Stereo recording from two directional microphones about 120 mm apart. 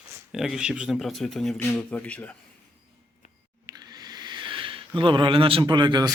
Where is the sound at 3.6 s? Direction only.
35° right (ahead or behind).